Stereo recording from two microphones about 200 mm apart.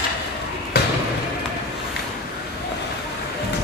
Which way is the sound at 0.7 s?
55° left (ahead or behind).